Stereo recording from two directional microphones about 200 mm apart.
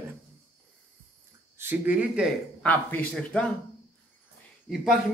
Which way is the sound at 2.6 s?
5° left (ahead or behind).